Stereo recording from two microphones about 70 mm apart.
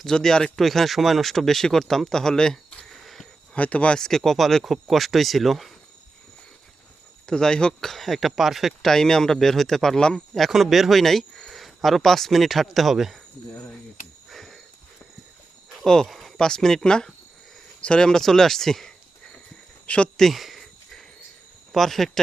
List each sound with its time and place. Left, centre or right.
0.0 s speech: centre
3.5 s speech: centre
3.9 s speech: centre
7.3 s speech: centre
14.3 s a sound: centre
15.8 s speech: centre
20.1 s a sound: centre
21.7 s speech: centre